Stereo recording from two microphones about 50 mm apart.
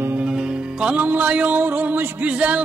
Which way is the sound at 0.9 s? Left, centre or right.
Right.